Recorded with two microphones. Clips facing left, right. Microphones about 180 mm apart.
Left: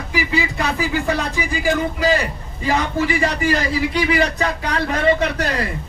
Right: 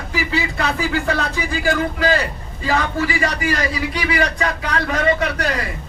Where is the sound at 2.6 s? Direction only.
20° left (ahead or behind).